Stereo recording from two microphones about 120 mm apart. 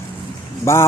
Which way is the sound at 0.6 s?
25° left (ahead or behind).